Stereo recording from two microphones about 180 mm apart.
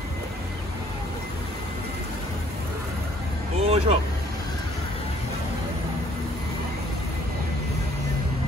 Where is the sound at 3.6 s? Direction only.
35° right (ahead or behind).